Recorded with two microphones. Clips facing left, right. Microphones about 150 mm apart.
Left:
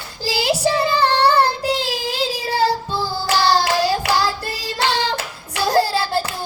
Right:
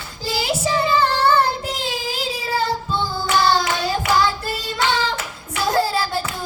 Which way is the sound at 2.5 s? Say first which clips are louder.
Left 2 dB; 35° left (ahead or behind).